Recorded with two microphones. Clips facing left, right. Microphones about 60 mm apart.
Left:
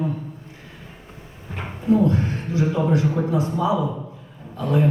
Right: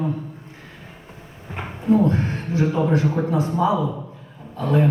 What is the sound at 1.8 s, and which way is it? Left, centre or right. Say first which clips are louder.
A man's voice: right 1 dB; right.